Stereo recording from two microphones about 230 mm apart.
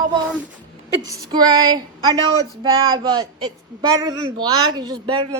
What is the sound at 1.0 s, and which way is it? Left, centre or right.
Speech, centre.